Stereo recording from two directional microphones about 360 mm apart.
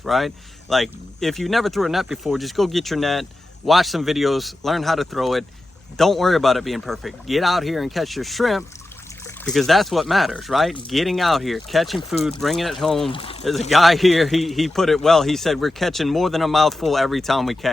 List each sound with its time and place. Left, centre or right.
0.0 s a man's voice: centre
13.1 s speech: centre
13.7 s a man's voice: centre